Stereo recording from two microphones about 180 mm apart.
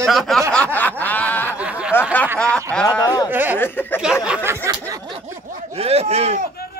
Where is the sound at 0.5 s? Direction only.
10° left (ahead or behind).